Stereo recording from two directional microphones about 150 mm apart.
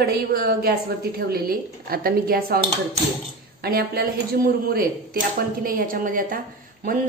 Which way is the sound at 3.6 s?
85° right.